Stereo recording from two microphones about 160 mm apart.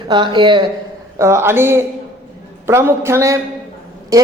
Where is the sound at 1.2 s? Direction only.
15° right (ahead or behind).